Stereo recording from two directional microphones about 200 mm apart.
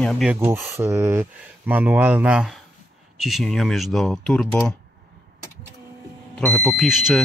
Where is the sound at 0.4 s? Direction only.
10° right (ahead or behind); by 4.5 s 5° left (ahead or behind).